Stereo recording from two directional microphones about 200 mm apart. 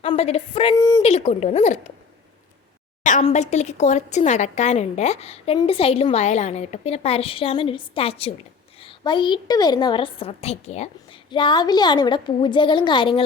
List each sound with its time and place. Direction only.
0.0 s a sound: 30° left (ahead or behind)
0.8 s speech: 15° left (ahead or behind)
1.0 s speech: 30° left (ahead or behind)
3.0 s a woman's voice: 40° left (ahead or behind)